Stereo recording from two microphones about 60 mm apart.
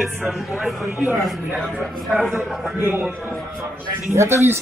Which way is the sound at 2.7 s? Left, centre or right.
Right.